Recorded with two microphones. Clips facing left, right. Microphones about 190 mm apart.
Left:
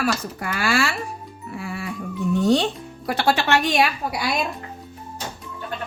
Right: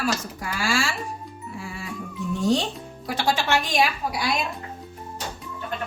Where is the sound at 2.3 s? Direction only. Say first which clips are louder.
Left 4 dB; 65° left (ahead or behind).